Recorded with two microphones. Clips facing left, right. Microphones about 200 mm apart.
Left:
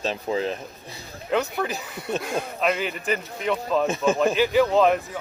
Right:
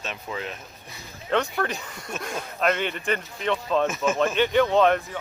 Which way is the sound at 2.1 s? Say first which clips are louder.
Left 7 dB; 35° left (ahead or behind).